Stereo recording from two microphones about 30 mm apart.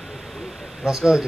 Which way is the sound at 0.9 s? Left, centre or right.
Right.